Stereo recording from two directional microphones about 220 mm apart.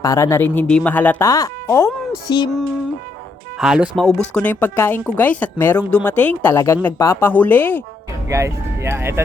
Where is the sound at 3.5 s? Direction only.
5° right (ahead or behind).